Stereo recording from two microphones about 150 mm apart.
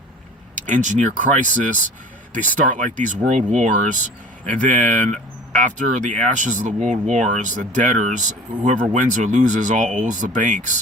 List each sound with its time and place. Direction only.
0.5 s speech: 55° right (ahead or behind)